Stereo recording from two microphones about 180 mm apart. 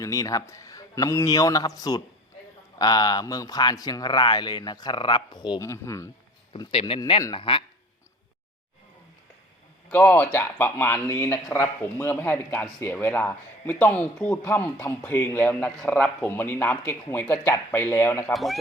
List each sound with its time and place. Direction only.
0.0 s speech: 20° left (ahead or behind)
6.5 s speech: 30° left (ahead or behind)
7.0 s speech: 20° left (ahead or behind)
7.3 s speech: 30° left (ahead or behind)
9.9 s a man's voice: 10° left (ahead or behind)
18.3 s speech: centre (ahead or behind)